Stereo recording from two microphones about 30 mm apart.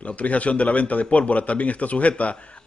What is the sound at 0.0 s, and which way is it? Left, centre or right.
A man's voice, left.